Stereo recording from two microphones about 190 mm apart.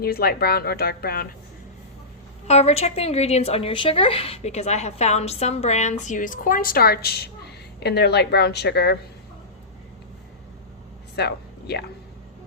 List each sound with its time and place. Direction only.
0.0 s speech: 55° left (ahead or behind)
2.5 s speech: 35° left (ahead or behind); by 9.0 s 60° left (ahead or behind)
11.1 s a sound: 60° left (ahead or behind)